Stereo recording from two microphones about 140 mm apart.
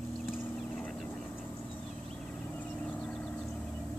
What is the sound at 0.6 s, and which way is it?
Vehicle, 5° left (ahead or behind).